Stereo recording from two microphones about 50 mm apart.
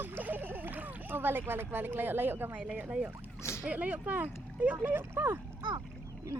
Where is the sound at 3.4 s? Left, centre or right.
Left.